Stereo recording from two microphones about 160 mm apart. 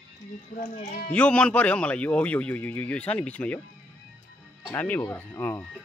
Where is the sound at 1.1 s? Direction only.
5° left (ahead or behind).